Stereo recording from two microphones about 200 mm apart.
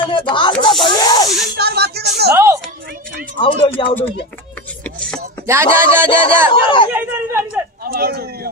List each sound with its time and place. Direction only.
0.1 s speech: 25° left (ahead or behind)
1.6 s a sound: 55° right (ahead or behind)
2.3 s a woman's voice: 15° right (ahead or behind)
3.3 s speech: 25° left (ahead or behind)
4.8 s a sound: 5° left (ahead or behind)
5.5 s speech: 10° right (ahead or behind)
6.5 s speech: 25° left (ahead or behind)
6.9 s a sound: 10° right (ahead or behind)
7.8 s a man's voice: 50° right (ahead or behind)